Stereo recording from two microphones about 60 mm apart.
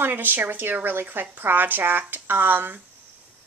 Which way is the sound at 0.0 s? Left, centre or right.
Right.